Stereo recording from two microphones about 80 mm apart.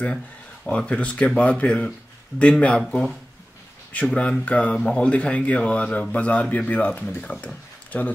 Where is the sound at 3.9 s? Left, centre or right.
Centre.